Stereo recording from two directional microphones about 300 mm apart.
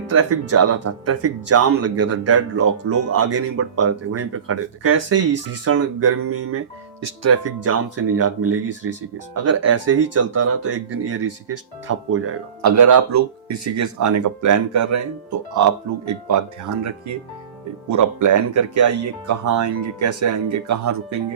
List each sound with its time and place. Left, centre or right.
0.1 s speech: right
12.6 s speech: right
20.2 s speech: right